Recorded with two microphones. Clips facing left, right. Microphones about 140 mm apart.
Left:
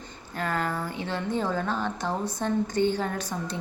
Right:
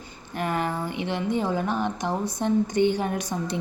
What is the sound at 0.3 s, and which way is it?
A woman's voice, 20° right (ahead or behind).